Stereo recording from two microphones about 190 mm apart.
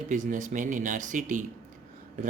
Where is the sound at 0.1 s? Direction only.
40° right (ahead or behind).